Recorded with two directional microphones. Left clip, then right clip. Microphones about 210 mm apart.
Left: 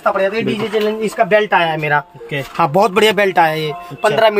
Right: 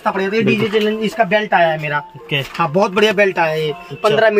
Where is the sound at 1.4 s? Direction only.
50° left (ahead or behind).